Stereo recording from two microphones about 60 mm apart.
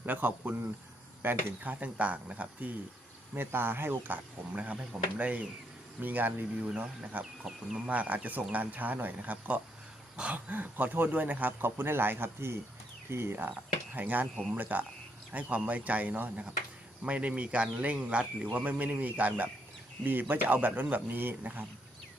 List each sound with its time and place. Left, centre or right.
0.0 s speech: right
3.3 s speech: right
4.5 s speech: right
11.6 s speech: right
13.9 s speech: right